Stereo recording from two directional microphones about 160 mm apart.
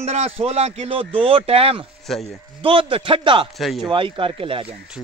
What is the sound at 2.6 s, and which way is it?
Speech, 35° right (ahead or behind).